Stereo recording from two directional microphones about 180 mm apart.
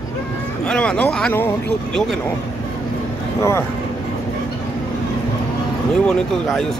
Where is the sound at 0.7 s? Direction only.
5° left (ahead or behind).